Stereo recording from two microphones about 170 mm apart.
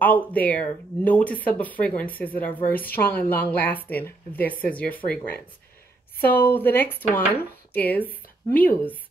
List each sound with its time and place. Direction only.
0.0 s a woman's voice: 10° left (ahead or behind)